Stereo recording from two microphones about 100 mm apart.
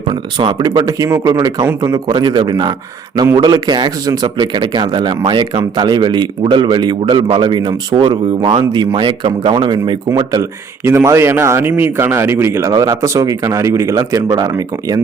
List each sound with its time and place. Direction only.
0.1 s a man's voice: 50° right (ahead or behind)
10.8 s speech: 30° right (ahead or behind)